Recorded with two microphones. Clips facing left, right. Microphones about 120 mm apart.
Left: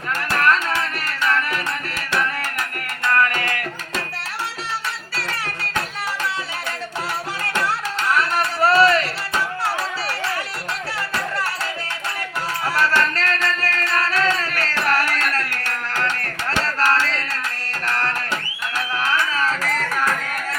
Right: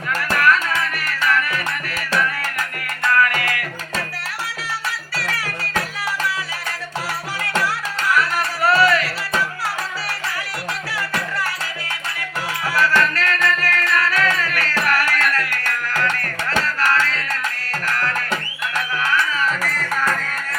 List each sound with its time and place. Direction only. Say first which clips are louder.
0.3 s music: right 1 dB; 30° left (ahead or behind)
3.1 s music: right 1 dB; 35° left (ahead or behind)
5.1 s music: right 1 dB; 25° left (ahead or behind)
7.6 s music: even; 25° left (ahead or behind)
12.6 s music: right 1 dB; 30° left (ahead or behind)
19.4 s music: left 1 dB; 25° left (ahead or behind)